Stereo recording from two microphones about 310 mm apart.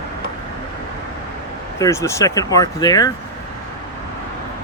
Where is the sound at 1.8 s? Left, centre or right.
Centre.